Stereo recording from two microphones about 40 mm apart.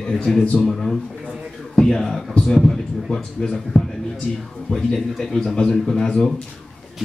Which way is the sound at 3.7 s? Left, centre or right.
Left.